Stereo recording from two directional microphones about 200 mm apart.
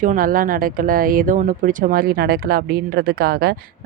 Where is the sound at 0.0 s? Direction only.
40° right (ahead or behind).